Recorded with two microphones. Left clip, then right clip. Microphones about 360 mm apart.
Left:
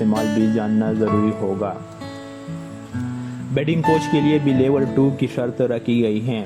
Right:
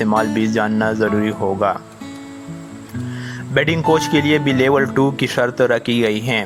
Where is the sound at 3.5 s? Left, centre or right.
Right.